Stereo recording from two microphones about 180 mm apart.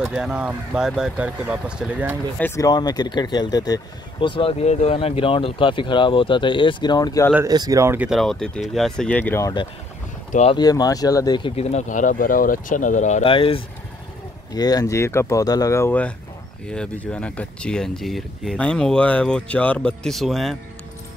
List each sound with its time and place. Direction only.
0.0 s speech: 5° right (ahead or behind)
2.3 s speech: 15° left (ahead or behind)
7.3 s speech: 20° right (ahead or behind); by 9.5 s 10° left (ahead or behind)
10.5 s speech: 20° left (ahead or behind); by 13.3 s 40° left (ahead or behind)
13.3 s speech: 30° left (ahead or behind); by 20.5 s centre (ahead or behind)